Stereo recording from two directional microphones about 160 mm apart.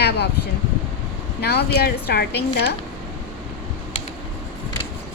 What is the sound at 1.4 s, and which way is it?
Speech, 90° left.